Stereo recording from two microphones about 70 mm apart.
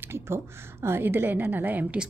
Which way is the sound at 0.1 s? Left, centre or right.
Right.